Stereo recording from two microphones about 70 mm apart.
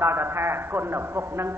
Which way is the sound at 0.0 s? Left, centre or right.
Right.